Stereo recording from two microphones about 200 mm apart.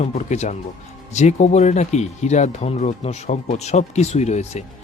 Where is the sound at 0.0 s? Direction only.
35° left (ahead or behind).